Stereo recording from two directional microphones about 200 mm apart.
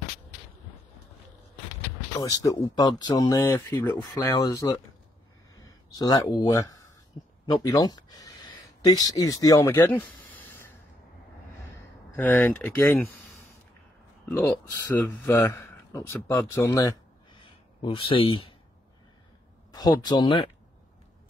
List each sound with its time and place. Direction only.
2.1 s speech: 20° left (ahead or behind)
12.2 s speech: 10° left (ahead or behind)
14.3 s speech: 10° left (ahead or behind)
17.4 s a sound: 25° left (ahead or behind)
19.7 s speech: 20° left (ahead or behind)